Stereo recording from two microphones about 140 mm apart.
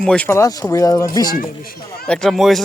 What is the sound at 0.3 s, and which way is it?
Speech, 20° left (ahead or behind).